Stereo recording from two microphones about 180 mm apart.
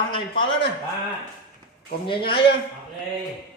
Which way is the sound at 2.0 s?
30° left (ahead or behind).